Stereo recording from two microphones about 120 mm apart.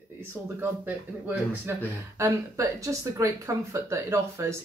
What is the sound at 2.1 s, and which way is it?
Speech, 25° right (ahead or behind).